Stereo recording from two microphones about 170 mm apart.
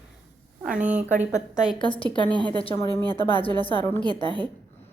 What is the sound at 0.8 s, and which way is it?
Speech, 10° right (ahead or behind).